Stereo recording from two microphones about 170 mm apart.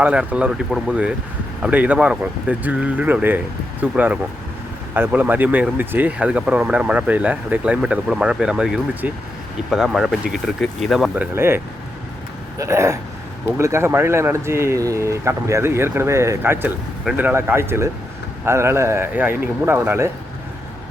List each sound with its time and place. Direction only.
0.0 s speech: 5° right (ahead or behind)